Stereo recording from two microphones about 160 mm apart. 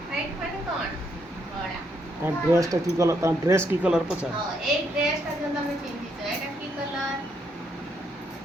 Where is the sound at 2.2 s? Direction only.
20° right (ahead or behind).